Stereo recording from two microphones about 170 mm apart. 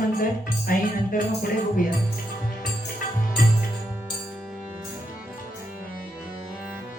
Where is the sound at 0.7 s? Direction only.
55° left (ahead or behind).